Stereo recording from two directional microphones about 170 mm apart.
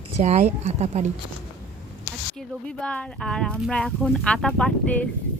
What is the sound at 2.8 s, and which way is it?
Speech, 5° left (ahead or behind).